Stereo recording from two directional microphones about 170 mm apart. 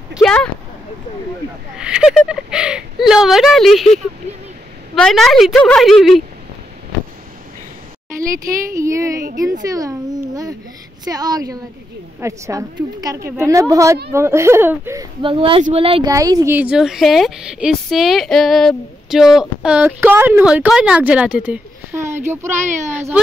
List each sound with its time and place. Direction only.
0.1 s speech: 5° left (ahead or behind)
1.8 s speech: 5° right (ahead or behind)
8.7 s a woman's voice: 15° right (ahead or behind)
9.7 s babbling: 20° right (ahead or behind)
11.1 s a woman's voice: 20° right (ahead or behind)
15.2 s speech: 30° right (ahead or behind)
16.1 s a woman's voice: 20° right (ahead or behind)
16.5 s a woman's voice: 5° right (ahead or behind)